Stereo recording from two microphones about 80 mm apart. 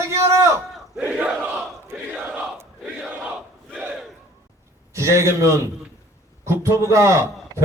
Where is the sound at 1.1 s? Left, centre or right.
Centre.